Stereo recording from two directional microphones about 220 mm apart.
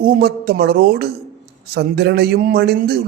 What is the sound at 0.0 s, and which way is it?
A man's voice, 45° right (ahead or behind).